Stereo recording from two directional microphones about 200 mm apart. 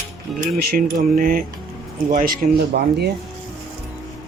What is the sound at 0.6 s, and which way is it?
Speech, 50° right (ahead or behind).